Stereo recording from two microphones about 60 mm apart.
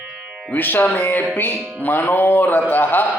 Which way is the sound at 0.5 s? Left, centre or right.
Left.